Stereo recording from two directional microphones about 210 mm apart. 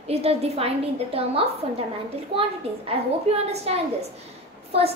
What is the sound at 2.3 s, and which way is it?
Speech, 55° right (ahead or behind).